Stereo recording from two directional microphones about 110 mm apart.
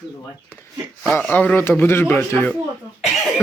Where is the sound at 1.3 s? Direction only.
15° left (ahead or behind).